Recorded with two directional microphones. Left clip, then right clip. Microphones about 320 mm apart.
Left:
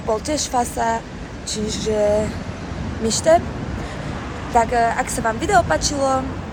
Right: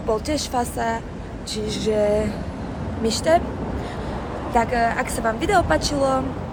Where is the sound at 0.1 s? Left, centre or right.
Centre.